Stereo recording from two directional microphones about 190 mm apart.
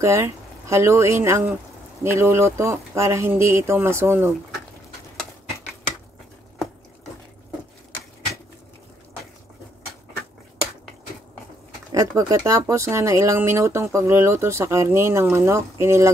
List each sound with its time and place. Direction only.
0.0 s speech: 15° right (ahead or behind)
11.9 s speech: 20° right (ahead or behind)